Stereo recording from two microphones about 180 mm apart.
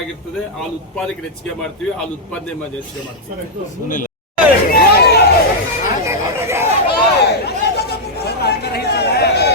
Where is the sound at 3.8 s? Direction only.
45° left (ahead or behind).